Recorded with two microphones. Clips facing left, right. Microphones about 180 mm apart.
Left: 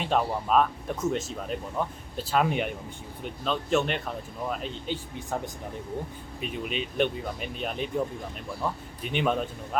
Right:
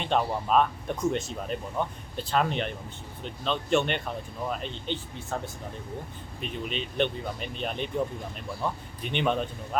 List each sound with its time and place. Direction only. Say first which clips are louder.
0.0 s speech: even; centre (ahead or behind)
6.4 s speech: left 1 dB; 10° left (ahead or behind)